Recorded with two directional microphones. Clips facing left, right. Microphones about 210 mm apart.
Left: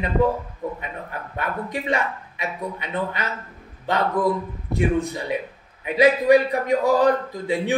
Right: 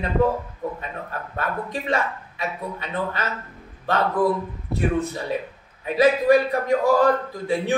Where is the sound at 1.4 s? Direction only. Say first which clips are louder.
Even; 15° left (ahead or behind).